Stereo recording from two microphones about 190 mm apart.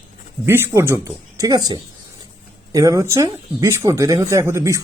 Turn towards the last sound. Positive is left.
turn(degrees=-15)  # may be behind; listen again after turning